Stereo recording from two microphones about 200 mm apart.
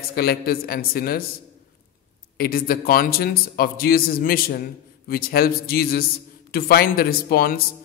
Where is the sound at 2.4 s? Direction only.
45° left (ahead or behind).